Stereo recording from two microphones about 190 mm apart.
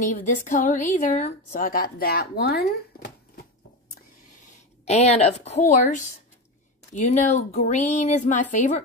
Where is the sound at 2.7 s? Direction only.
55° left (ahead or behind).